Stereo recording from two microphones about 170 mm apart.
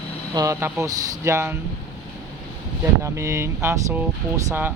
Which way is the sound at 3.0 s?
15° right (ahead or behind).